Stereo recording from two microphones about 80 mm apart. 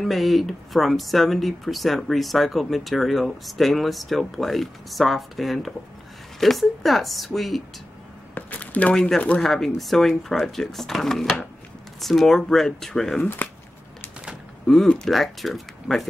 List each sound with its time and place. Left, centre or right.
0.0 s speech: centre
8.4 s a sound: centre
8.9 s speech: centre
13.4 s speech: left
14.7 s speech: centre